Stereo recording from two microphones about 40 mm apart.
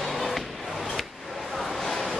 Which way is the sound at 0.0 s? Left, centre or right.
Centre.